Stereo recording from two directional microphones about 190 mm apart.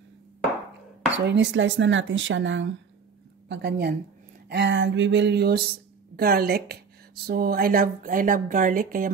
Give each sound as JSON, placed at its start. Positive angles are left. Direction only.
{"t": 1.2, "sound": "speech", "side_deg": -70}
{"t": 3.4, "sound": "a woman's voice", "side_deg": -70}